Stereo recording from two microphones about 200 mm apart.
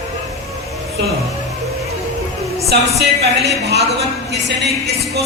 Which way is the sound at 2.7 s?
55° right (ahead or behind).